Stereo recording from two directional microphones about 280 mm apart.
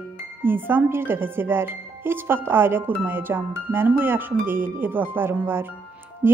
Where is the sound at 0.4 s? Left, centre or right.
Centre.